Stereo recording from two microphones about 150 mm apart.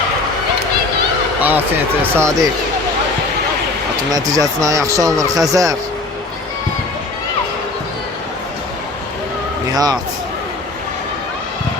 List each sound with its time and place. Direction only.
1.4 s a sound: 10° right (ahead or behind)
2.1 s speech: 20° right (ahead or behind)
4.1 s speech: 25° right (ahead or behind)
9.7 s speech: 25° right (ahead or behind)